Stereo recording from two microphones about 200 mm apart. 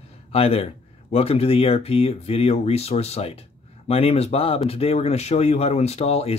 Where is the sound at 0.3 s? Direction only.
30° left (ahead or behind).